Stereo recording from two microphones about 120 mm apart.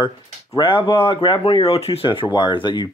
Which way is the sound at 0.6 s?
45° left (ahead or behind).